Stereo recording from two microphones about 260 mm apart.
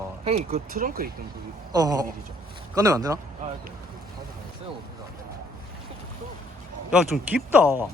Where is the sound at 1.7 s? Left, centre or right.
Centre.